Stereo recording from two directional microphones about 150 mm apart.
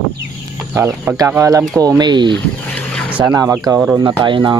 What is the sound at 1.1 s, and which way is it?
Speech, 20° right (ahead or behind).